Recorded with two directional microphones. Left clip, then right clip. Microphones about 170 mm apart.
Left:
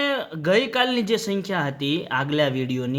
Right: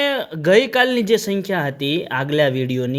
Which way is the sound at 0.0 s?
30° right (ahead or behind).